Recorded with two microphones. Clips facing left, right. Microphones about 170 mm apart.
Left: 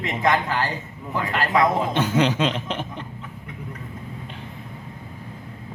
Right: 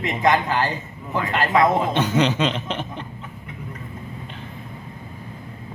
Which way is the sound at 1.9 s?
10° left (ahead or behind).